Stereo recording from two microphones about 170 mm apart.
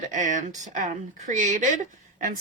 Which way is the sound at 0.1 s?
45° right (ahead or behind).